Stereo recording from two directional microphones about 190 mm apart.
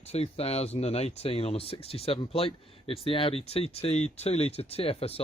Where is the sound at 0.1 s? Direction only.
30° left (ahead or behind).